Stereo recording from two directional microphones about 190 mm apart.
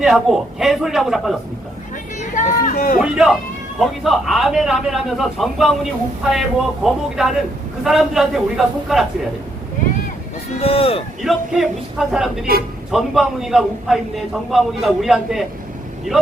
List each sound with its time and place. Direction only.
0.0 s a man's voice: centre (ahead or behind)
2.3 s a sound: 40° left (ahead or behind)
3.0 s a man's voice: 5° right (ahead or behind)
10.6 s speech: 30° left (ahead or behind)
11.2 s a man's voice: centre (ahead or behind)